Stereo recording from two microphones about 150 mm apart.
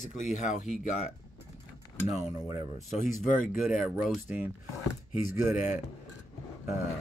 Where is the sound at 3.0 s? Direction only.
60° left (ahead or behind).